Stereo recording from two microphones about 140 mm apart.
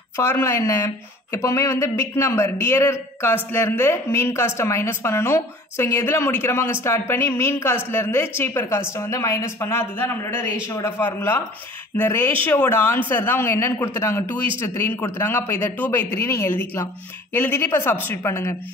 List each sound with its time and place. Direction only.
0.2 s a man's voice: 20° left (ahead or behind)